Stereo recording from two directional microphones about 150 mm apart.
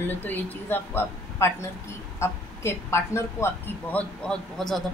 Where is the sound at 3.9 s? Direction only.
5° left (ahead or behind).